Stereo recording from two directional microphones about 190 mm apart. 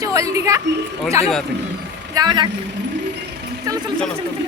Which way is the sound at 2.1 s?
25° right (ahead or behind).